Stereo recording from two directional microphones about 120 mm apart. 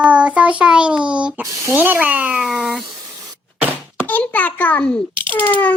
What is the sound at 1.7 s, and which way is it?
Speech, 15° right (ahead or behind).